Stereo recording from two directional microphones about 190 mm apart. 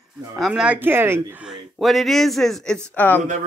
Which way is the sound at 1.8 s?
Centre (ahead or behind).